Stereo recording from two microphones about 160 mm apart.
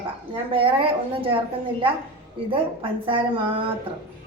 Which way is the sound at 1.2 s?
35° right (ahead or behind).